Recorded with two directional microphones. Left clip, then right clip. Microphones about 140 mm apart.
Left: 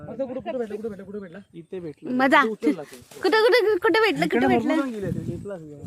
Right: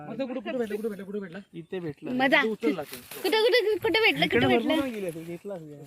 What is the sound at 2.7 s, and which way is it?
Speech, centre (ahead or behind).